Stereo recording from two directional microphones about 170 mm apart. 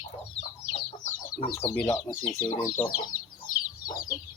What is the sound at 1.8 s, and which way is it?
Speech, 15° left (ahead or behind).